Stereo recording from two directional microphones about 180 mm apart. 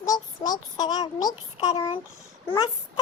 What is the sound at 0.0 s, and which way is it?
A child's voice, 20° left (ahead or behind).